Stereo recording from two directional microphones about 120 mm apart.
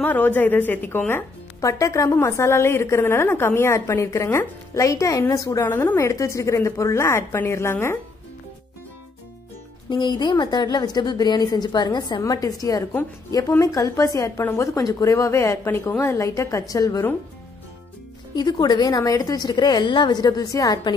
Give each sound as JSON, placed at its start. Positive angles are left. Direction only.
{"t": 0.0, "sound": "speech", "side_deg": 15}
{"t": 9.8, "sound": "a woman's voice", "side_deg": 40}
{"t": 18.3, "sound": "a woman's voice", "side_deg": 35}